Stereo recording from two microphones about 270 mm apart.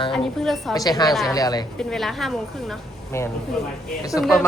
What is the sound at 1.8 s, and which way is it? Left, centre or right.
A woman's voice, centre.